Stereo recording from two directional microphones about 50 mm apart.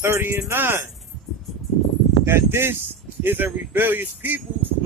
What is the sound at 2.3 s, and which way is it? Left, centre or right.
Speech, right.